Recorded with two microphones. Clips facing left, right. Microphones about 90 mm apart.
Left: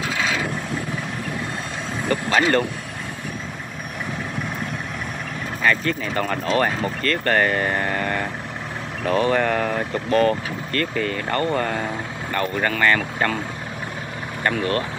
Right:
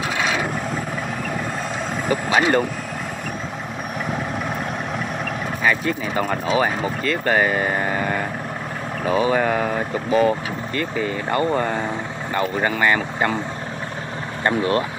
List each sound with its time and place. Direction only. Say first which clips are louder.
2.0 s speech: right 1 dB; 10° right (ahead or behind)
5.6 s speech: even; 10° right (ahead or behind)
14.4 s speech: right 3 dB; 20° right (ahead or behind)